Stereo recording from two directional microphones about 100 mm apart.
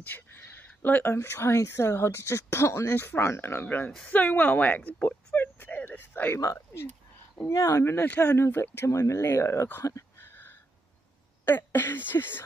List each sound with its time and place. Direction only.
0.0 s speech: 20° left (ahead or behind)
6.3 s speech: 30° left (ahead or behind)